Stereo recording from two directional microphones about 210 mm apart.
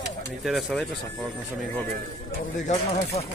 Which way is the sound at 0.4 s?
Centre (ahead or behind).